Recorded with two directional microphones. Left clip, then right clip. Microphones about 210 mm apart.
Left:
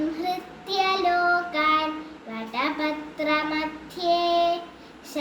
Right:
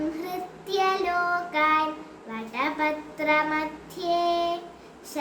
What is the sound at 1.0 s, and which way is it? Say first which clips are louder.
Child singing: left 4 dB; 15° right (ahead or behind).